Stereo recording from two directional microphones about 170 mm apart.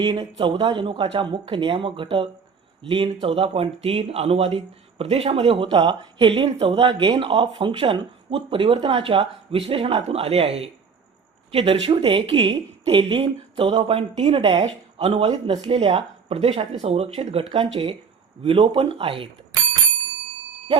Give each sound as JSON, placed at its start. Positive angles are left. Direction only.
{"t": 0.0, "sound": "speech", "side_deg": -25}
{"t": 18.4, "sound": "speech", "side_deg": -30}